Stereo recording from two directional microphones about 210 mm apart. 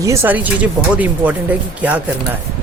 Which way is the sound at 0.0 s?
15° right (ahead or behind).